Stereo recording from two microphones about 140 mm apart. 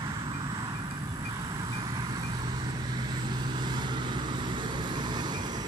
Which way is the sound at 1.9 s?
30° right (ahead or behind).